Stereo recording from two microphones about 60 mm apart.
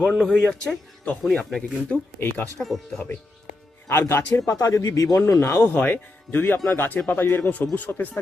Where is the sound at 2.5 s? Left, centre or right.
Centre.